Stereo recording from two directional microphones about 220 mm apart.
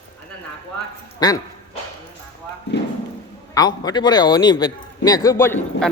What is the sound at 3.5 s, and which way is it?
A man's voice, 20° left (ahead or behind).